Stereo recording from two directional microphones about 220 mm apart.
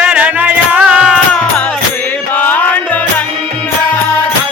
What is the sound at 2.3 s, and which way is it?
Music, 5° left (ahead or behind).